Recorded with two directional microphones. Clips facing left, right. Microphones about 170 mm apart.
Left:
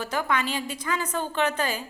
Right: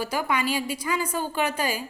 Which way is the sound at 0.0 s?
10° right (ahead or behind).